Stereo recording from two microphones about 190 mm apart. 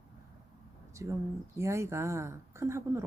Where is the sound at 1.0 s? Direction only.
15° right (ahead or behind).